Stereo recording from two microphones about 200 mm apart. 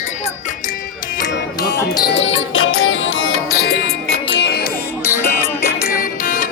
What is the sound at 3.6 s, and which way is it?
Music, 55° left (ahead or behind).